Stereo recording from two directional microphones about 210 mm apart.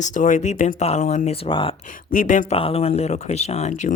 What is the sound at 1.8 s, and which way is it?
Speech, 40° left (ahead or behind).